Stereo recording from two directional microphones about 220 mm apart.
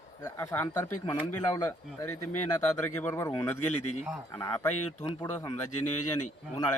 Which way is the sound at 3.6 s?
90° left.